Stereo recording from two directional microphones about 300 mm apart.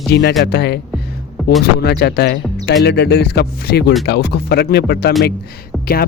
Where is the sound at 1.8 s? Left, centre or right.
Left.